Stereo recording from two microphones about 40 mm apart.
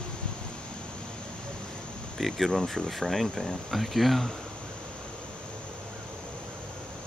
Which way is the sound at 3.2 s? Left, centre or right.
Centre.